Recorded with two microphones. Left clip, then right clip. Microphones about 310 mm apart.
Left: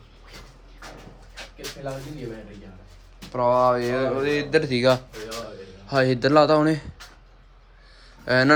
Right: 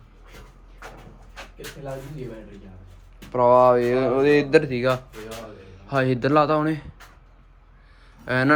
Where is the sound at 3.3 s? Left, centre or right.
Centre.